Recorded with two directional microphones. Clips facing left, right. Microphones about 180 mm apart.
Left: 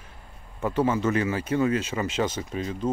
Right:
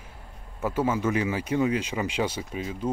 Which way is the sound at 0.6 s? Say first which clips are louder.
Left 2 dB; 10° right (ahead or behind).